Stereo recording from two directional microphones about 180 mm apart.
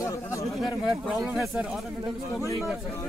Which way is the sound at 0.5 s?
Centre (ahead or behind).